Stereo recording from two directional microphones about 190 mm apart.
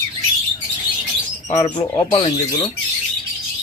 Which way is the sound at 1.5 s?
25° left (ahead or behind).